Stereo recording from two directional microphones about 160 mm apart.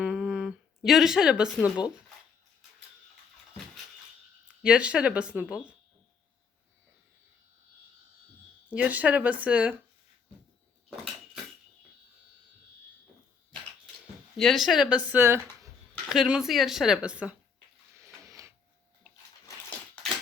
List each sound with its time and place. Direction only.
0.0 s a sound: 5° right (ahead or behind)
4.4 s speech: 5° right (ahead or behind)
8.7 s speech: 10° right (ahead or behind)
14.3 s speech: centre (ahead or behind); by 15.7 s 20° right (ahead or behind)
16.0 s a woman's voice: 5° right (ahead or behind)
18.0 s a sound: 20° right (ahead or behind)